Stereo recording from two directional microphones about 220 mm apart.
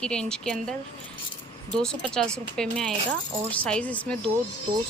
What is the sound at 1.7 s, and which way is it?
A woman's voice, 5° left (ahead or behind).